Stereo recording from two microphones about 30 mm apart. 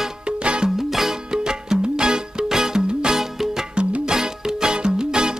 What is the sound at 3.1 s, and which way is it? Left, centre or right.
Music, centre.